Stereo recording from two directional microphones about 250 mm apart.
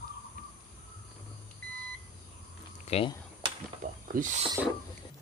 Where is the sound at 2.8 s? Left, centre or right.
Left.